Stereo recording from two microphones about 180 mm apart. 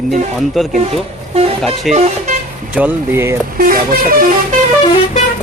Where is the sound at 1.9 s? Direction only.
40° right (ahead or behind).